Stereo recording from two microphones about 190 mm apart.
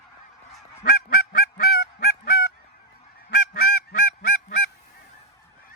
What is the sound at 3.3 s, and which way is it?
Honk, 55° left (ahead or behind).